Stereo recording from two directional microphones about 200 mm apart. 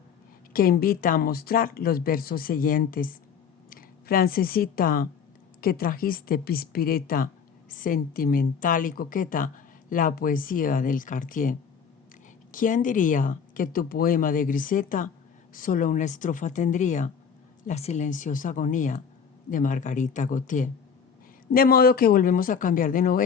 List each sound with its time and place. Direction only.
0.5 s speech: 45° left (ahead or behind)